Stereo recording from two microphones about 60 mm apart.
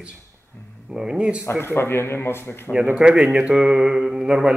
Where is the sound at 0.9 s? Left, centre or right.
Centre.